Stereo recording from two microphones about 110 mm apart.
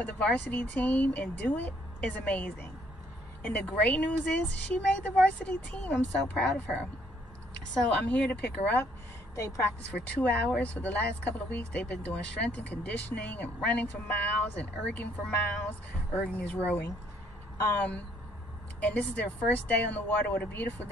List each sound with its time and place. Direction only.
0.0 s speech: 10° left (ahead or behind)
9.3 s a woman's voice: 30° left (ahead or behind)
9.8 s speech: 15° left (ahead or behind)